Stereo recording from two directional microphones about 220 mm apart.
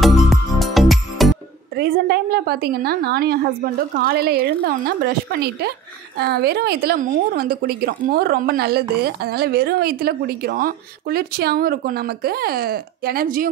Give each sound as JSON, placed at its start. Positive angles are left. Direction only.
{"t": 0.0, "sound": "music", "side_deg": 0}
{"t": 1.8, "sound": "a woman's voice", "side_deg": -45}